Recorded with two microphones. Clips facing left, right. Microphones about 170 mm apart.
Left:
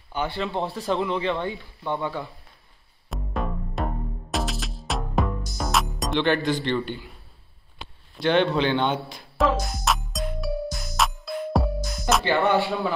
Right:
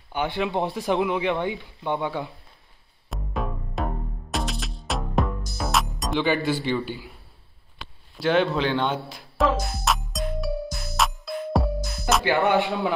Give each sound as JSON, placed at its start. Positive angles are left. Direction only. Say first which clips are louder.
{"t": 0.1, "sound": "speech", "louder": "right 2 dB", "side_deg": -15}
{"t": 3.1, "sound": "music", "louder": "left 1 dB", "side_deg": 0}
{"t": 5.6, "sound": "speech", "louder": "even", "side_deg": 0}
{"t": 8.2, "sound": "speech", "louder": "left 1 dB", "side_deg": -5}
{"t": 9.8, "sound": "music", "louder": "even", "side_deg": 0}
{"t": 12.4, "sound": "speech", "louder": "even", "side_deg": -20}